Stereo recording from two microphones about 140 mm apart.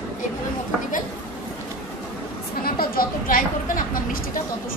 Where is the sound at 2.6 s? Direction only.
90° left.